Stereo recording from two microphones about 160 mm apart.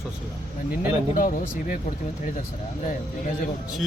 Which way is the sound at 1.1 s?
55° left (ahead or behind).